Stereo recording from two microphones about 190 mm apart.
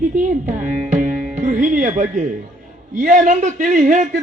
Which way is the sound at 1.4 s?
45° right (ahead or behind).